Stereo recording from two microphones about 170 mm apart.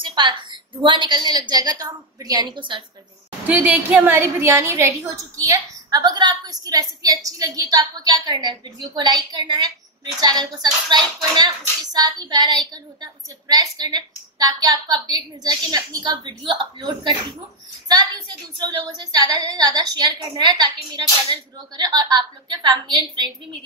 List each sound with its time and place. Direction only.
0.0 s a sound: 25° right (ahead or behind)
0.8 s speech: 30° right (ahead or behind)
3.4 s speech: 10° right (ahead or behind); by 17.2 s 25° right (ahead or behind)
18.6 s speech: 25° right (ahead or behind)